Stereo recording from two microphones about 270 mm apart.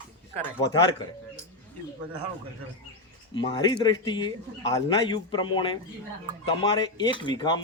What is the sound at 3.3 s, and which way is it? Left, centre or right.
Speech, centre.